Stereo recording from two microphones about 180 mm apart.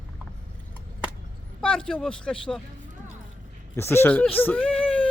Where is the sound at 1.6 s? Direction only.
5° left (ahead or behind).